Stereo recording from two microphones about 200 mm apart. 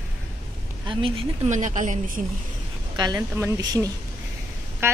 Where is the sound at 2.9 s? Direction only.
20° right (ahead or behind).